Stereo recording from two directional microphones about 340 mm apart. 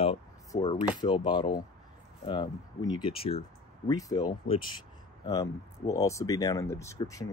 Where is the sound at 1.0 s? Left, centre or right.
Centre.